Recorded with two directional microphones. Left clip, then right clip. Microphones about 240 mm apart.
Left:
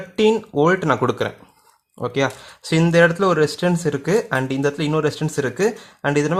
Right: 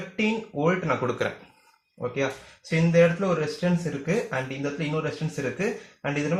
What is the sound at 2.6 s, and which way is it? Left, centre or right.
Speech, left.